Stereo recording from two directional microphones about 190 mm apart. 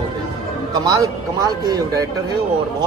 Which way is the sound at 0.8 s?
15° right (ahead or behind).